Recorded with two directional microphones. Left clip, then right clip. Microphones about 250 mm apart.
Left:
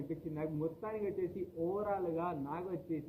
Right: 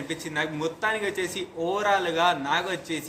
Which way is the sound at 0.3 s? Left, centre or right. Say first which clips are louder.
Right 12 dB; right.